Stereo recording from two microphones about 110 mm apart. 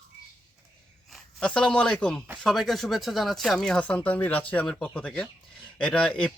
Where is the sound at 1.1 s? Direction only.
5° left (ahead or behind).